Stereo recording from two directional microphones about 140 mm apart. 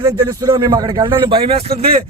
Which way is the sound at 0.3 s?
30° right (ahead or behind).